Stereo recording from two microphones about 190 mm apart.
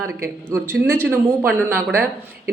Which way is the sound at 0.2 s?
15° right (ahead or behind).